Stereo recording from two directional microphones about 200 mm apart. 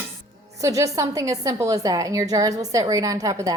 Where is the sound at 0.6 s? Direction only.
15° right (ahead or behind).